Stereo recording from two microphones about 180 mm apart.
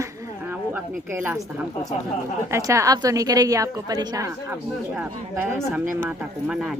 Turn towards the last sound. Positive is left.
turn(degrees=-5)  # may be behind; listen again after turning